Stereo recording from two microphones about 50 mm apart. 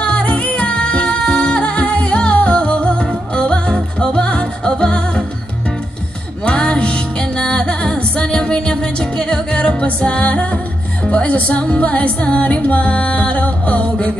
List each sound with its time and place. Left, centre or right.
0.0 s music: left
6.4 s music: left